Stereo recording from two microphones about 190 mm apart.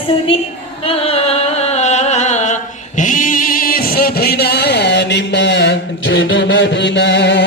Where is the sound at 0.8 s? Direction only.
30° left (ahead or behind).